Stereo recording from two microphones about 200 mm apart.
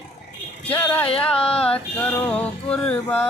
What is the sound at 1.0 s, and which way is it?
Female singing, 30° left (ahead or behind).